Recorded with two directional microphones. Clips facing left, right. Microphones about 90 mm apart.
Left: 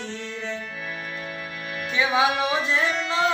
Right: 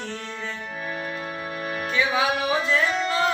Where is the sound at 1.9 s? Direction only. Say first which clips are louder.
Left 2 dB; 20° left (ahead or behind).